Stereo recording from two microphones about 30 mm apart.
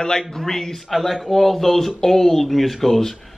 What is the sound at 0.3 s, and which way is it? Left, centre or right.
Speech, centre.